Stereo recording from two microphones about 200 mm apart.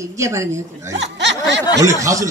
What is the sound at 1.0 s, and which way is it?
Snicker, 60° right (ahead or behind).